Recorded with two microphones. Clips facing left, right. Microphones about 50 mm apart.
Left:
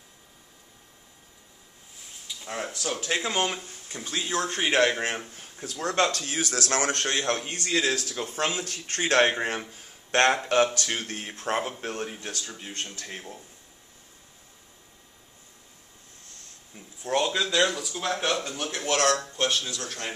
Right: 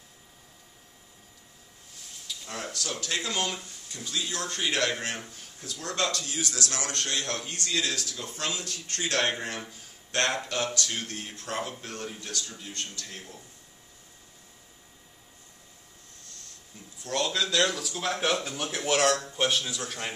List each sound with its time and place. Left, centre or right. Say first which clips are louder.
2.2 s speech: left 3 dB; centre
5.7 s a man's voice: left 5 dB; left
16.7 s a man's voice: left 4 dB; left; by 20.2 s centre